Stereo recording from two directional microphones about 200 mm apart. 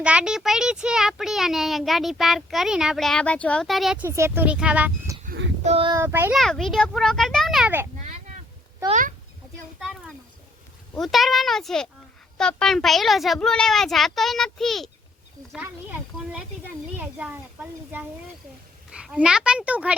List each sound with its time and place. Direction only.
0.0 s a child's voice: 5° right (ahead or behind)
5.6 s speech: 30° right (ahead or behind)
5.9 s a child's voice: 15° right (ahead or behind)
6.3 s a child's voice: centre (ahead or behind)
8.9 s a child's voice: 40° right (ahead or behind)
10.9 s a child's voice: centre (ahead or behind)